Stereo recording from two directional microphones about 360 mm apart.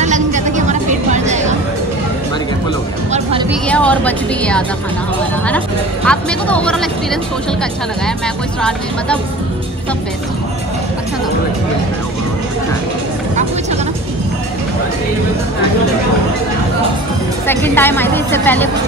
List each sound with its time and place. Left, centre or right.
0.0 s a sound: centre
3.4 s music: centre
6.0 s a woman's voice: centre
17.5 s a woman's voice: centre